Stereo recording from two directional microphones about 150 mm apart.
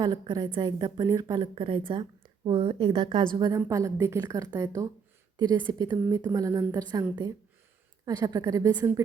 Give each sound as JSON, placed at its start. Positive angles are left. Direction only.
{"t": 0.0, "sound": "a woman's voice", "side_deg": -30}
{"t": 8.0, "sound": "a woman's voice", "side_deg": -25}